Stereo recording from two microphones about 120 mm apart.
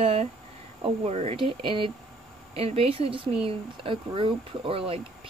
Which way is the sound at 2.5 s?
55° right (ahead or behind).